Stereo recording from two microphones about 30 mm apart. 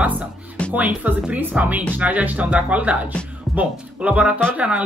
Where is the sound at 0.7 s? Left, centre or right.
Right.